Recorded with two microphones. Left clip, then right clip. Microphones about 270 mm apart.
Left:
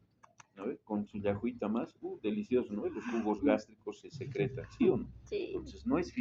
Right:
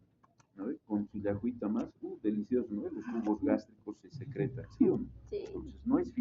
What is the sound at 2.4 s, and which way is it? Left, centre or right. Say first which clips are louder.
Speech: left 1 dB; left.